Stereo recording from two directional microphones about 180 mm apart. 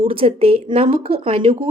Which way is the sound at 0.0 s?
30° right (ahead or behind).